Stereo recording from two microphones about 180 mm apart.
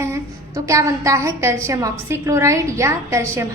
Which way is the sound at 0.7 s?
15° right (ahead or behind).